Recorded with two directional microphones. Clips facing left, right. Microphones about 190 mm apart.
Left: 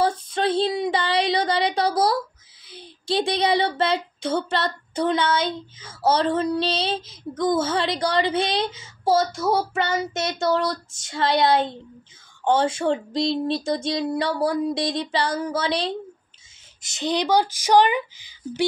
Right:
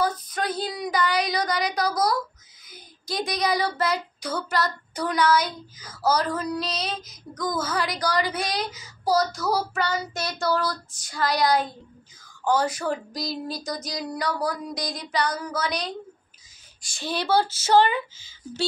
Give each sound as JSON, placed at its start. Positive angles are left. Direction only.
{"t": 0.0, "sound": "child singing", "side_deg": 25}
{"t": 2.6, "sound": "a sound", "side_deg": 30}
{"t": 16.8, "sound": "speech", "side_deg": 20}